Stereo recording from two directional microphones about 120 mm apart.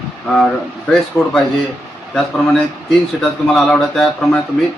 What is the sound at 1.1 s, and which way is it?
Speech, 15° left (ahead or behind).